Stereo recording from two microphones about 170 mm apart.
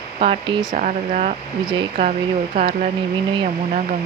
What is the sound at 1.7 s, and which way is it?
Speech, 30° right (ahead or behind).